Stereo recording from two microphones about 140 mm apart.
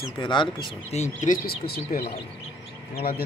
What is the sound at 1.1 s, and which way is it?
A man's voice, 80° left.